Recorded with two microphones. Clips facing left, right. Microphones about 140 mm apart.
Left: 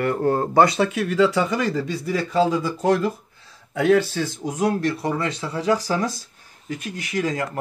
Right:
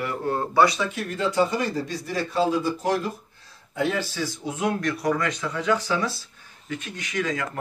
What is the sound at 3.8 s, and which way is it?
Speech, 70° left (ahead or behind).